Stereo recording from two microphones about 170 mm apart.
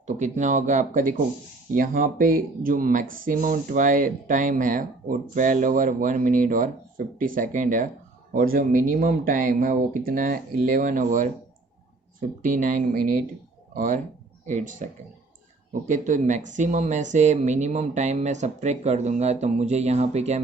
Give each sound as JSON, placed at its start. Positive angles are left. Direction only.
{"t": 0.2, "sound": "speech", "side_deg": -45}
{"t": 12.4, "sound": "speech", "side_deg": -50}